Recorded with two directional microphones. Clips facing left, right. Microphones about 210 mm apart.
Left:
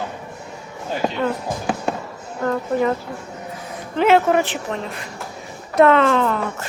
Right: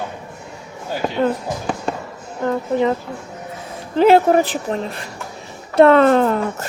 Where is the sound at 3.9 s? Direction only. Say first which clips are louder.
Right 3 dB; 35° right (ahead or behind).